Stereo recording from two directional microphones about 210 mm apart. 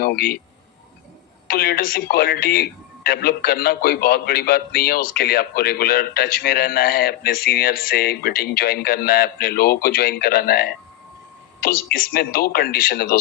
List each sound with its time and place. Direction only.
0.0 s speech: 45° left (ahead or behind)
1.5 s speech: 45° left (ahead or behind)